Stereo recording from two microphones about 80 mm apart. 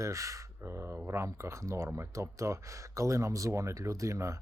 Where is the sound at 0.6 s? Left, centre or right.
Right.